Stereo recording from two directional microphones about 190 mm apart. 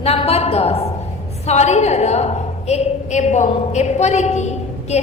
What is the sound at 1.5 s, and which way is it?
A woman's voice, 35° left (ahead or behind).